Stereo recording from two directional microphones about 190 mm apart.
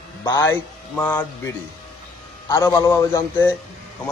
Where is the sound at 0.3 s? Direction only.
15° left (ahead or behind).